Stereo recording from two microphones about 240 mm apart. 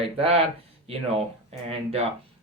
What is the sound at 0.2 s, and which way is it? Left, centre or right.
Speech, right.